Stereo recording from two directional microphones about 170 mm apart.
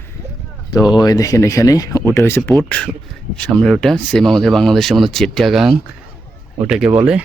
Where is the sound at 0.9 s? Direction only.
25° left (ahead or behind); by 7.2 s 10° right (ahead or behind).